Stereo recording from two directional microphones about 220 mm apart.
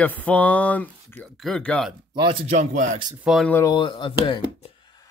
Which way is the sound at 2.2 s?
25° right (ahead or behind).